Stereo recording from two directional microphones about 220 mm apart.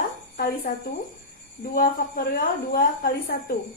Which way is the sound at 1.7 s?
40° left (ahead or behind).